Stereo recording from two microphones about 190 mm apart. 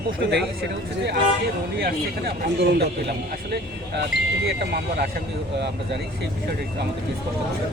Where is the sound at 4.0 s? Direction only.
60° right (ahead or behind).